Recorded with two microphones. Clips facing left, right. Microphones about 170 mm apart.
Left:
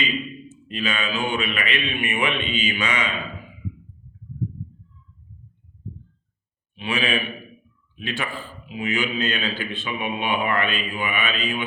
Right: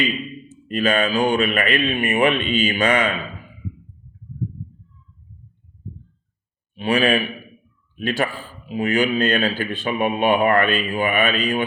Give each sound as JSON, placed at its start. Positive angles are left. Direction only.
{"t": 0.7, "sound": "a man's voice", "side_deg": -45}
{"t": 6.7, "sound": "a man's voice", "side_deg": -40}